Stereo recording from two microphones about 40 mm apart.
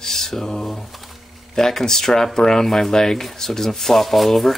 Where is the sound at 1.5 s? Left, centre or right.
Centre.